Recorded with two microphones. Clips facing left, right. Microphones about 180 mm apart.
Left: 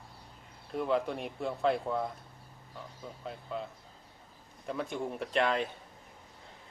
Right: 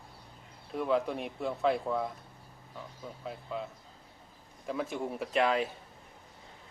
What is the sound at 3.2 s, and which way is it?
Speech, centre (ahead or behind).